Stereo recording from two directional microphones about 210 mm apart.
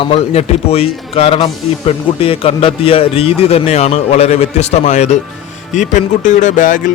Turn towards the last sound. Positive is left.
turn(degrees=40)  # may be behind; listen again after turning